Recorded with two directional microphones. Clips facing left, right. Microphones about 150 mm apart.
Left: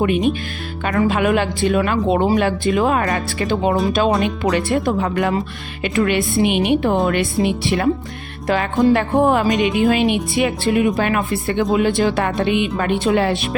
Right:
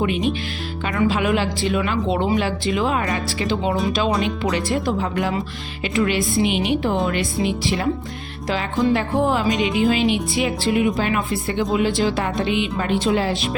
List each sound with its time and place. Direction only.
0.0 s speech: 50° left (ahead or behind)